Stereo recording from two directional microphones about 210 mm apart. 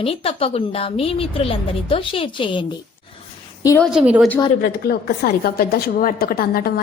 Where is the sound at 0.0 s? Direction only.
25° left (ahead or behind).